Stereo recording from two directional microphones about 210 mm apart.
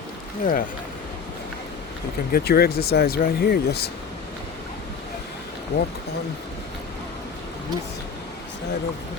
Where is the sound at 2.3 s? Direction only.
45° left (ahead or behind).